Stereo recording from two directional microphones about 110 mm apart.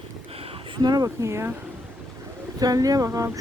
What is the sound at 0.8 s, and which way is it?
Speech, 40° right (ahead or behind).